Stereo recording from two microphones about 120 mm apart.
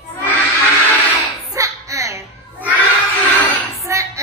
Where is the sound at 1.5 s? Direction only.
25° right (ahead or behind).